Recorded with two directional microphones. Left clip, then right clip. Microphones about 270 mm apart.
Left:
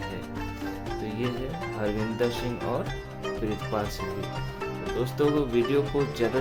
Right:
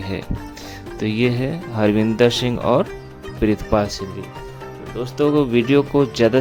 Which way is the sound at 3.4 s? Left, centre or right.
Right.